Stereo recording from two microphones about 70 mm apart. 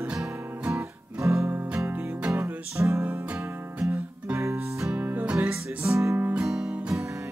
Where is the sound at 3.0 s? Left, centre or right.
Right.